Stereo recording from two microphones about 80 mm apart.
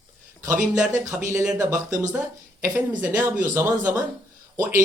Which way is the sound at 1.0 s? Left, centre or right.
Right.